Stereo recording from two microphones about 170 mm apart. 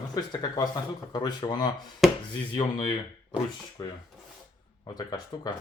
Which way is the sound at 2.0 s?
Centre (ahead or behind).